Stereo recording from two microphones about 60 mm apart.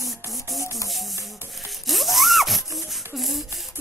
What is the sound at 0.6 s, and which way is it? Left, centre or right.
Music, left.